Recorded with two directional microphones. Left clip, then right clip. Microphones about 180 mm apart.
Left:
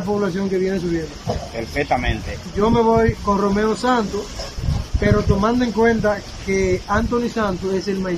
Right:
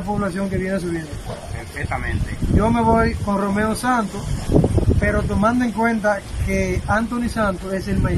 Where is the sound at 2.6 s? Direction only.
5° right (ahead or behind).